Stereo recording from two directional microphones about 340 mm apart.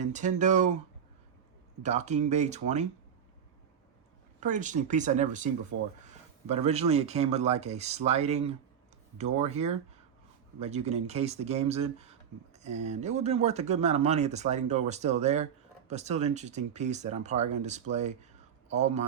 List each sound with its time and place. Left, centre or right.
0.0 s speech: right
1.8 s speech: centre
4.4 s speech: right
6.5 s speech: centre